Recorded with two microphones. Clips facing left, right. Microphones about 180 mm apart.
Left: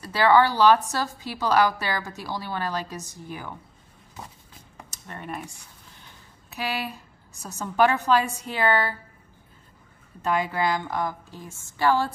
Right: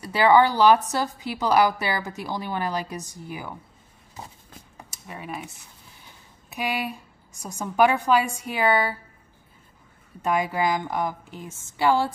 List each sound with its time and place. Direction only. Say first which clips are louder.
0.0 s a woman's voice: right 1 dB; 15° right (ahead or behind)
4.9 s speech: even; 5° right (ahead or behind)
6.5 s a woman's voice: right 2 dB; 15° right (ahead or behind)
10.2 s a woman's voice: right 1 dB; 15° right (ahead or behind)